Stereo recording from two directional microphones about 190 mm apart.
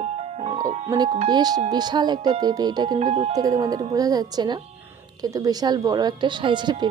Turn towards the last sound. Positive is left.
turn(degrees=-25)  # may be behind; listen again after turning